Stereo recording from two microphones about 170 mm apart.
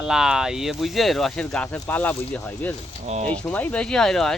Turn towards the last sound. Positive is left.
turn(degrees=0)  # may be behind; listen again after turning